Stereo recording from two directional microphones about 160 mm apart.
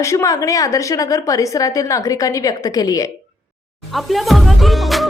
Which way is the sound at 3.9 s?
Centre (ahead or behind).